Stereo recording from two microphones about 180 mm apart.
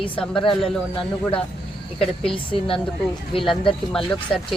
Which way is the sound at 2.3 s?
30° left (ahead or behind).